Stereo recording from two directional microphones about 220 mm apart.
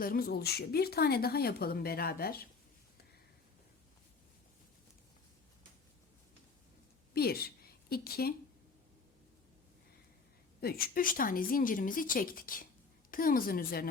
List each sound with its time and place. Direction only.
0.0 s speech: 40° left (ahead or behind)
7.1 s a woman's voice: 45° left (ahead or behind)
10.6 s a woman's voice: 45° left (ahead or behind)